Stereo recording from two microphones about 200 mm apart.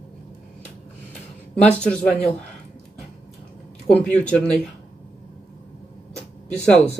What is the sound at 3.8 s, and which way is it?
Speech, 5° left (ahead or behind).